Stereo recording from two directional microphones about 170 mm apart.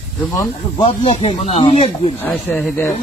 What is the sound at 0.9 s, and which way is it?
Speech, 35° left (ahead or behind).